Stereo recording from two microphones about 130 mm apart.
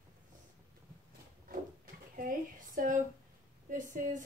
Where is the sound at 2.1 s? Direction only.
90° right.